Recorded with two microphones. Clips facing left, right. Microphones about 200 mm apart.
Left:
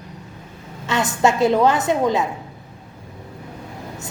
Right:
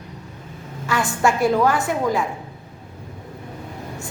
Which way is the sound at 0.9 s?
20° left (ahead or behind).